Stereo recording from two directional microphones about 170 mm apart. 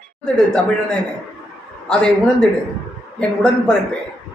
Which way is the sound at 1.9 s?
5° left (ahead or behind).